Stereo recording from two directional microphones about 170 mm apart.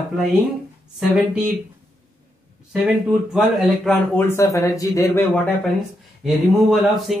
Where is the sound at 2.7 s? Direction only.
5° right (ahead or behind).